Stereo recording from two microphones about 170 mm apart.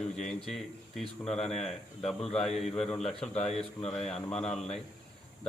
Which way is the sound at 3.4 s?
35° left (ahead or behind).